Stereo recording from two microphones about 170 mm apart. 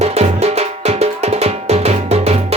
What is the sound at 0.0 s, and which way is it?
Music, 40° right (ahead or behind).